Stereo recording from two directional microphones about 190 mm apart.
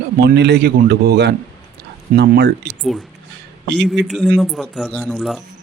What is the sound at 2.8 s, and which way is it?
Speech, centre (ahead or behind).